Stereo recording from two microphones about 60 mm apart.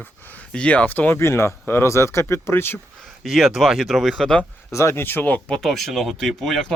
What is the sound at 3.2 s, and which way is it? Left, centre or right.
Speech, centre.